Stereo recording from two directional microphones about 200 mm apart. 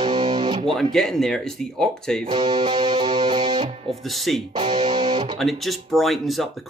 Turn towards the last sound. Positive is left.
turn(degrees=0)  # may be behind; listen again after turning